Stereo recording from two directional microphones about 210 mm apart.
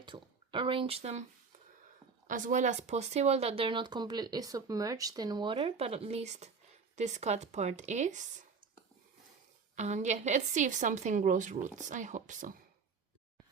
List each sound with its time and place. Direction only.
0.0 s speech: 25° right (ahead or behind)
2.2 s a woman's voice: 40° right (ahead or behind)
9.7 s a woman's voice: 35° right (ahead or behind)